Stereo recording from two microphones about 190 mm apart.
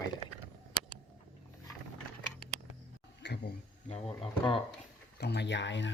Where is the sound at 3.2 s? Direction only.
65° left (ahead or behind).